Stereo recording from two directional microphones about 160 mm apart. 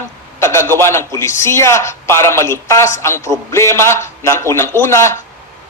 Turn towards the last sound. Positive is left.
turn(degrees=15)  # may be behind; listen again after turning